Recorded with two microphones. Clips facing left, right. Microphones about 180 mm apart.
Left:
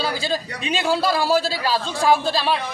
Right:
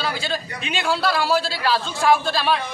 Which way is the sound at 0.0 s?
40° left (ahead or behind).